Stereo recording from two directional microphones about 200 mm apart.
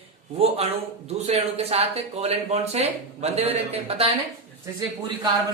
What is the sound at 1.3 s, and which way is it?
Speech, 30° right (ahead or behind).